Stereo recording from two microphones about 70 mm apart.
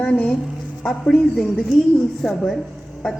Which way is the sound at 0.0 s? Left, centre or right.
Centre.